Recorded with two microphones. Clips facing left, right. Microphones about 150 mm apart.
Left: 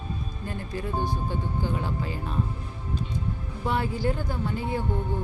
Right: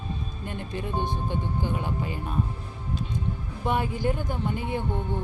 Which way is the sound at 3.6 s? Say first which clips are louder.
Right 1 dB; 15° right (ahead or behind).